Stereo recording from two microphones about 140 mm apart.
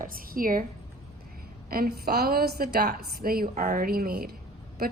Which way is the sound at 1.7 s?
90° right.